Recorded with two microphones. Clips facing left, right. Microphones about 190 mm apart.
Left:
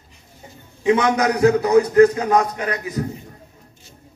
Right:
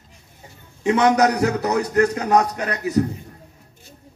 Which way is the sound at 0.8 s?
40° right (ahead or behind).